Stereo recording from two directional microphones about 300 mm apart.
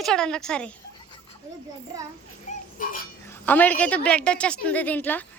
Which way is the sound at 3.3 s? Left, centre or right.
Centre.